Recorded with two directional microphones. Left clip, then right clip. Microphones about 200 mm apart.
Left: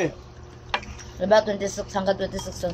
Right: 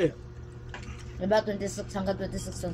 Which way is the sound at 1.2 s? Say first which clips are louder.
Left 7 dB; 15° right (ahead or behind).